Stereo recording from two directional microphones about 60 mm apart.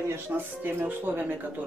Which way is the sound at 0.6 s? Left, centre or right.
Right.